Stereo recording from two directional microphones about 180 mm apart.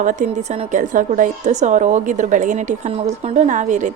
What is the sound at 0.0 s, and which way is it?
A woman's voice, 45° right (ahead or behind).